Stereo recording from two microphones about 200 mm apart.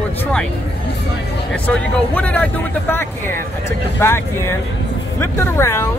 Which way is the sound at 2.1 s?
5° left (ahead or behind).